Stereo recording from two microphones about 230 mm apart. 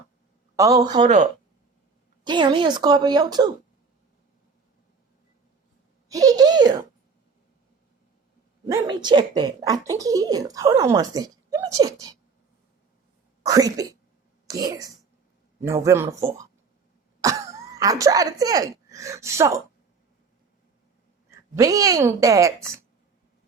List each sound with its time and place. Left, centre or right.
0.5 s speech: centre
1.0 s speech: right
2.2 s a woman's voice: centre
6.1 s speech: centre
8.6 s speech: centre
13.4 s speech: centre
17.2 s speech: centre
21.2 s speech: centre